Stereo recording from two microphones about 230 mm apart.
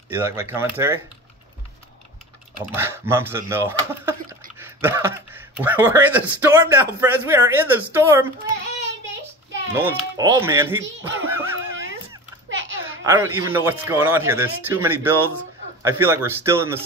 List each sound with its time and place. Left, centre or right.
0.1 s speech: centre
2.6 s speech: centre
9.8 s speech: centre
12.4 s a sound: right
13.0 s speech: centre